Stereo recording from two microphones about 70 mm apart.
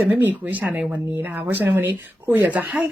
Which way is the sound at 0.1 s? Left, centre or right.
Right.